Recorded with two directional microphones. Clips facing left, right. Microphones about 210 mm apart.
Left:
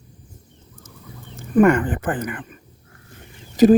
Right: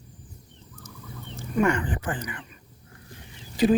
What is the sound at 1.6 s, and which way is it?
Speech, 55° left (ahead or behind).